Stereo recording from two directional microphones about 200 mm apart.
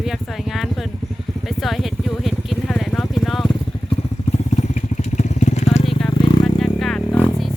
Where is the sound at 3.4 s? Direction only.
30° left (ahead or behind).